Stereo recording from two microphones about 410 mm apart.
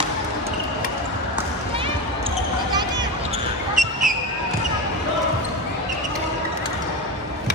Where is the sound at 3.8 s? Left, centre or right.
Centre.